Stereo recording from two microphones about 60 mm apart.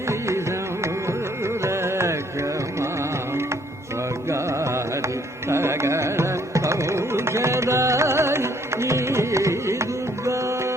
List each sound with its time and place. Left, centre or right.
0.1 s carnatic music: right
1.6 s carnatic music: right
4.3 s music: right